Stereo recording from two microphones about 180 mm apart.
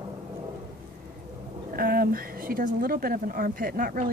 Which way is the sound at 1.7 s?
55° right (ahead or behind).